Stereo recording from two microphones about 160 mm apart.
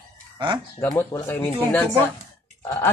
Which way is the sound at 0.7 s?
20° left (ahead or behind).